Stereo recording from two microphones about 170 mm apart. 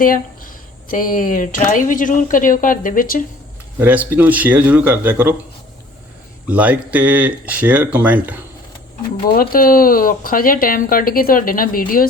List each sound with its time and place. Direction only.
0.0 s speech: 55° left (ahead or behind)
3.8 s speech: 10° right (ahead or behind)
6.5 s speech: 10° right (ahead or behind)
9.3 s speech: 60° left (ahead or behind)